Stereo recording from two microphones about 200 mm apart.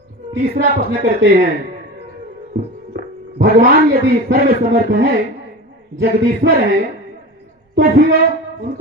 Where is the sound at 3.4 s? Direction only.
50° right (ahead or behind).